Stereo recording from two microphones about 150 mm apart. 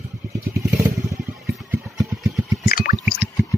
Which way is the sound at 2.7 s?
70° left (ahead or behind).